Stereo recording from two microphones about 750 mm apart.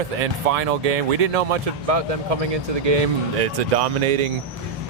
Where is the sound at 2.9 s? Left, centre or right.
Right.